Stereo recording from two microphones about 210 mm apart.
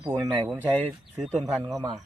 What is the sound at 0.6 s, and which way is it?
Speech, 5° left (ahead or behind).